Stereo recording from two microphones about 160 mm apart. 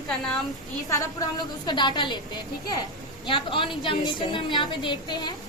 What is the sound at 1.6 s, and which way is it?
A woman's voice, 30° left (ahead or behind).